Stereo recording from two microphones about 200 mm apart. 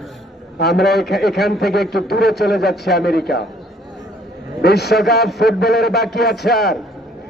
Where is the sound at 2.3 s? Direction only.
Centre (ahead or behind).